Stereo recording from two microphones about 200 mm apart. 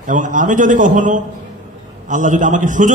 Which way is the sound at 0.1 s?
40° right (ahead or behind).